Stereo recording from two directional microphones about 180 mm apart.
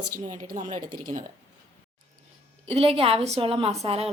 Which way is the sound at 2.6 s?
35° right (ahead or behind).